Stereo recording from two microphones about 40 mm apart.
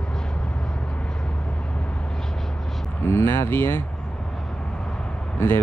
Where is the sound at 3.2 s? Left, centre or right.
Left.